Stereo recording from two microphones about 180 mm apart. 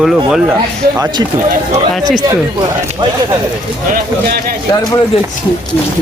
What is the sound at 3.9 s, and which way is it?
Speech, 55° right (ahead or behind).